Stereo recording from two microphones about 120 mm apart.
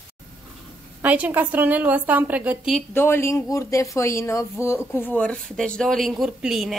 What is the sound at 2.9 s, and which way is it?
A woman's voice, 20° left (ahead or behind).